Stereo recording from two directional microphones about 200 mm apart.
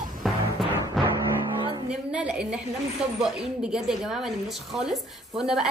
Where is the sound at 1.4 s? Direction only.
25° right (ahead or behind).